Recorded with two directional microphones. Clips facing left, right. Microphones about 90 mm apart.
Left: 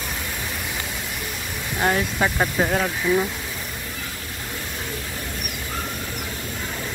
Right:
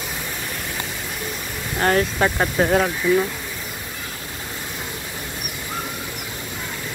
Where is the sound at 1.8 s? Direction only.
Centre (ahead or behind).